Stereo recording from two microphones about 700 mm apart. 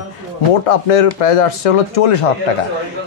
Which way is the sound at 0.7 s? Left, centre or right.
Left.